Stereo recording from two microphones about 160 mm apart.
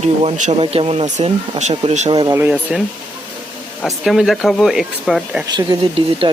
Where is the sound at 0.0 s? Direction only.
40° right (ahead or behind).